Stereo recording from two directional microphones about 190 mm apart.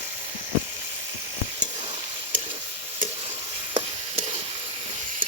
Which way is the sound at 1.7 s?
35° right (ahead or behind).